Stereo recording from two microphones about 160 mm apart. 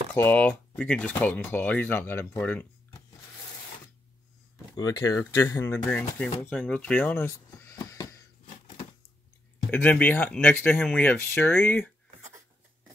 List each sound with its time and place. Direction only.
0.1 s speech: 10° left (ahead or behind)
4.7 s speech: 25° left (ahead or behind)
5.9 s speech: 5° left (ahead or behind)
6.5 s a sound: 10° left (ahead or behind)
9.7 s speech: 10° left (ahead or behind)